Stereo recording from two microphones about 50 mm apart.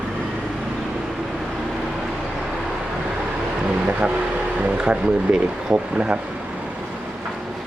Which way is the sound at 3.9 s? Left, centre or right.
Centre.